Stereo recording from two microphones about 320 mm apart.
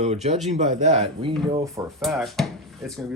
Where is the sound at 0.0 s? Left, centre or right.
Right.